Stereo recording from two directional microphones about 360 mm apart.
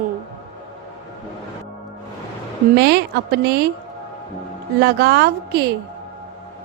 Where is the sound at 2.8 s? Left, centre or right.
Right.